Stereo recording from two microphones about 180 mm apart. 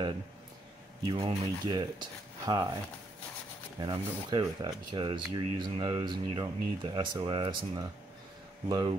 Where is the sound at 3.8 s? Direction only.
25° right (ahead or behind).